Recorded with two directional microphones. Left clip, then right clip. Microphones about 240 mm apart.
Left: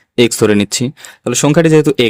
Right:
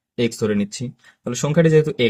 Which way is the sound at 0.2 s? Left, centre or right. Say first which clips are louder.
Left 10 dB; left.